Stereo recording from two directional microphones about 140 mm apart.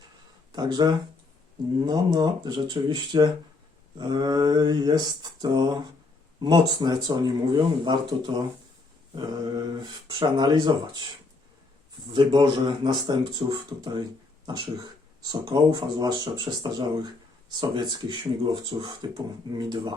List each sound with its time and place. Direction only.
0.5 s speech: 30° right (ahead or behind)
9.1 s speech: 30° right (ahead or behind)
12.1 s speech: 35° right (ahead or behind)